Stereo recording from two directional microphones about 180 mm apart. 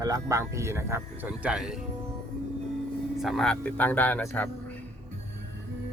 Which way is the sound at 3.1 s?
Centre (ahead or behind).